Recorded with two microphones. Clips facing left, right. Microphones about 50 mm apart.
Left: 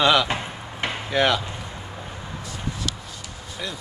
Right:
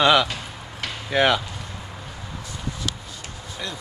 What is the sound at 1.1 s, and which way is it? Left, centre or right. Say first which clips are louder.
Speech: right 2 dB; centre.